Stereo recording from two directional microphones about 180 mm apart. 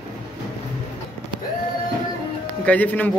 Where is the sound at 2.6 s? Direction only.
10° left (ahead or behind).